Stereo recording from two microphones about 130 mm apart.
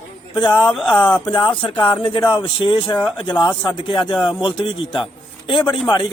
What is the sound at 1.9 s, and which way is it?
Speech, 40° left (ahead or behind).